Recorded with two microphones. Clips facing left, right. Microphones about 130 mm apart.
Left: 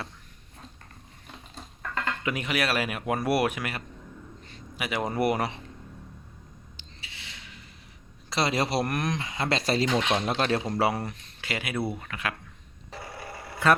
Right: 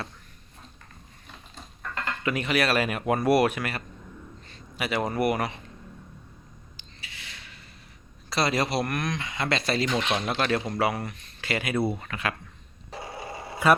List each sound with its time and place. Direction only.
2.2 s a man's voice: 15° left (ahead or behind)
6.7 s a sound: 25° left (ahead or behind)
8.3 s speech: 25° left (ahead or behind)
9.8 s speech: 15° left (ahead or behind)
10.2 s speech: 35° left (ahead or behind)
11.3 s speech: 10° left (ahead or behind)
13.0 s a sound: 20° right (ahead or behind)